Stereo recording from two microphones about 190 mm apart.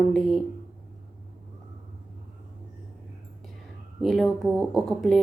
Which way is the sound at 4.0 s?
Centre (ahead or behind).